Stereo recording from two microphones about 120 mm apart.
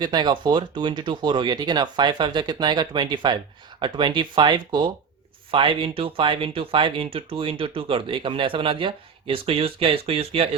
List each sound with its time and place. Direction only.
0.0 s speech: 35° right (ahead or behind); by 10.5 s 55° right (ahead or behind)